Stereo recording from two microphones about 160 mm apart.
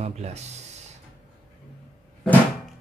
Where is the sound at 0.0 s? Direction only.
45° right (ahead or behind).